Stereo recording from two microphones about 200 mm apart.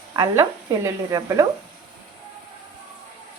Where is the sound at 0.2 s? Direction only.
15° right (ahead or behind).